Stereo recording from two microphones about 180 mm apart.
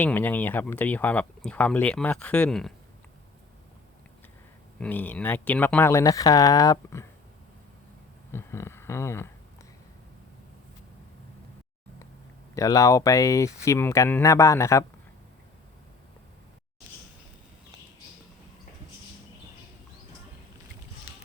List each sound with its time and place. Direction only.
0.0 s speech: 10° left (ahead or behind)
4.8 s speech: 10° left (ahead or behind)
8.3 s speech: 15° left (ahead or behind)
12.5 s speech: 20° left (ahead or behind)